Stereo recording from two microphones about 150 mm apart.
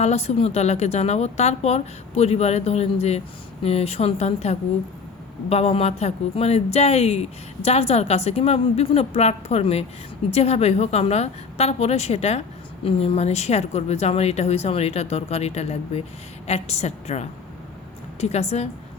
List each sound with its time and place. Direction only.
0.0 s speech: 45° left (ahead or behind)